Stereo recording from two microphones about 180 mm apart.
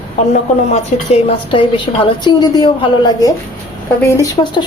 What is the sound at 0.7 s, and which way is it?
A woman's voice, 35° left (ahead or behind).